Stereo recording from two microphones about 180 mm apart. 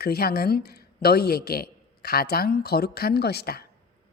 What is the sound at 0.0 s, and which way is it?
Speech, 60° left (ahead or behind).